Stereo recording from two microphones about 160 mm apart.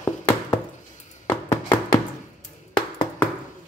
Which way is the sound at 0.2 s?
15° left (ahead or behind).